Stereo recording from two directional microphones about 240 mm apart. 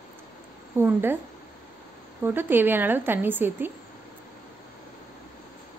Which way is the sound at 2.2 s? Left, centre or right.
Centre.